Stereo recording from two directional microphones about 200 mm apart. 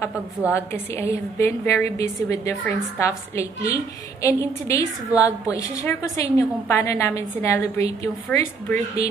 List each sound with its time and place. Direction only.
0.5 s a woman's voice: 15° left (ahead or behind)